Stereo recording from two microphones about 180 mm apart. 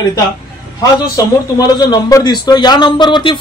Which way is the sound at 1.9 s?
20° left (ahead or behind).